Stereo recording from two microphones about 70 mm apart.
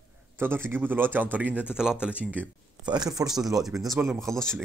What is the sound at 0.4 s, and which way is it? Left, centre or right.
A man's voice, right.